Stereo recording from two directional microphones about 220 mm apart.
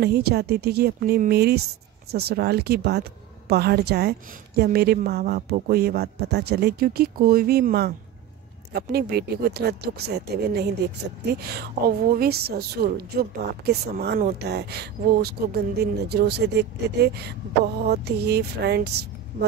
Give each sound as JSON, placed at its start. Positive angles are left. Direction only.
{"t": 0.0, "sound": "a woman's voice", "side_deg": -45}